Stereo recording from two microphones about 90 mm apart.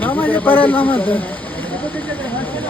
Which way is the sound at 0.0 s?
20° left (ahead or behind).